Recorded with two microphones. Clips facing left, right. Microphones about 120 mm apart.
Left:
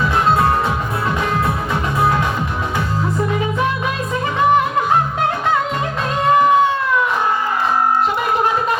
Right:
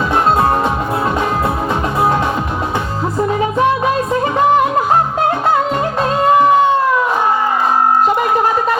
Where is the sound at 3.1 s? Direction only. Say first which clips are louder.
Right 6 dB; 35° right (ahead or behind).